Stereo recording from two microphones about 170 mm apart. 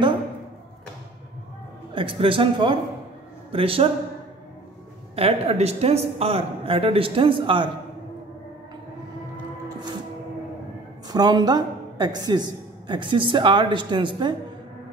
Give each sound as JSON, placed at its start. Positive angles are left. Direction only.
{"t": 2.0, "sound": "a woman's voice", "side_deg": -30}
{"t": 5.1, "sound": "a woman's voice", "side_deg": -35}
{"t": 11.1, "sound": "a woman's voice", "side_deg": -25}